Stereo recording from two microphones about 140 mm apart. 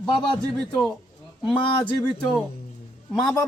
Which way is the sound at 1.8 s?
10° left (ahead or behind).